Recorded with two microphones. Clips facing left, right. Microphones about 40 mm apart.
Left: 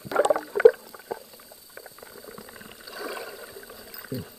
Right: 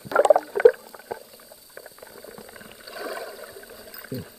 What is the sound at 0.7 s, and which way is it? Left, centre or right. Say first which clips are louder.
Rowboat: even; centre.